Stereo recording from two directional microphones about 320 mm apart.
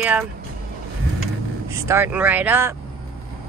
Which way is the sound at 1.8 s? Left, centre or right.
Centre.